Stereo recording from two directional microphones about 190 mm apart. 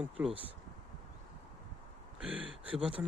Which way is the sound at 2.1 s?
5° right (ahead or behind).